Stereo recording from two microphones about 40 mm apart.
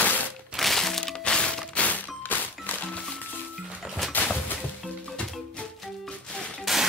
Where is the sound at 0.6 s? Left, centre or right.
Centre; by 1.7 s left.